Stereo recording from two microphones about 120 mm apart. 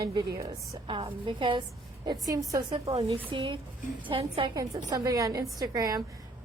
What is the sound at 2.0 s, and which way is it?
Speech, 30° right (ahead or behind).